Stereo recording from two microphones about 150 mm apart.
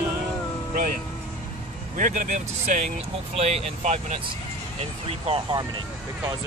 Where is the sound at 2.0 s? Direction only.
60° right (ahead or behind).